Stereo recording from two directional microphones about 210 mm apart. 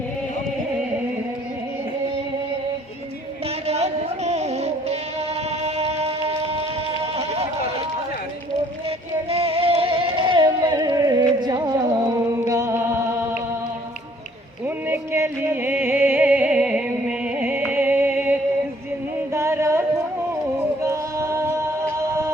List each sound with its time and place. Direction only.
3.7 s music: 30° right (ahead or behind)
9.3 s music: 30° right (ahead or behind); by 13.4 s 10° right (ahead or behind)
14.8 s music: 10° right (ahead or behind)
20.8 s music: 15° right (ahead or behind)